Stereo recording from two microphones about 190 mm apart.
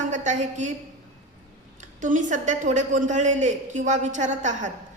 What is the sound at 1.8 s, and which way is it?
A woman's voice, 40° right (ahead or behind).